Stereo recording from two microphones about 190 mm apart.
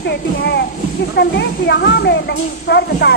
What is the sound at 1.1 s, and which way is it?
Speech, 60° left (ahead or behind).